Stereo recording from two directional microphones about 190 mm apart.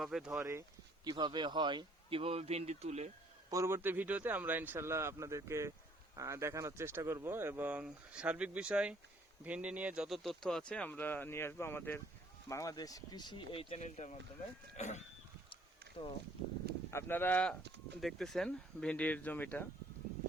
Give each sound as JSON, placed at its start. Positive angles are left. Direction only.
{"t": 0.0, "sound": "speech", "side_deg": 0}
{"t": 0.3, "sound": "speech", "side_deg": -15}
{"t": 3.5, "sound": "speech", "side_deg": -15}
{"t": 16.9, "sound": "speech", "side_deg": 10}